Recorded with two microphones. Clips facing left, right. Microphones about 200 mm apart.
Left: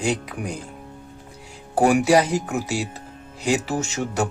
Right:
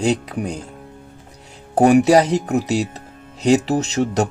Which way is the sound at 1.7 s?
40° right (ahead or behind).